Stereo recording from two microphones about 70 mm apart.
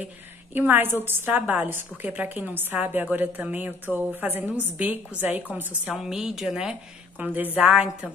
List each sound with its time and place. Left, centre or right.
0.0 s a woman's voice: right
5.9 s a woman's voice: centre
7.2 s a woman's voice: right